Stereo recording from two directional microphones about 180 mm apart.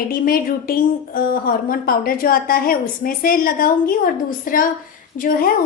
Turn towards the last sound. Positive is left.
turn(degrees=50)  # may be behind; listen again after turning